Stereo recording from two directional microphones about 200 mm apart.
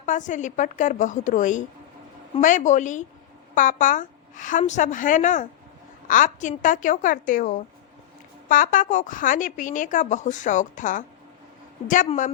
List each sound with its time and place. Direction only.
0.0 s a woman's voice: 40° left (ahead or behind)